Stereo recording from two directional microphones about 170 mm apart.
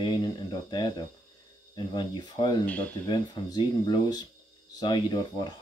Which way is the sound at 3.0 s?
25° left (ahead or behind).